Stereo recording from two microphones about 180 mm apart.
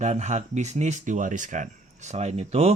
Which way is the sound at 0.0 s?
40° right (ahead or behind).